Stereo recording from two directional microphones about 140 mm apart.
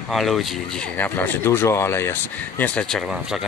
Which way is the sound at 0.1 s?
Centre (ahead or behind).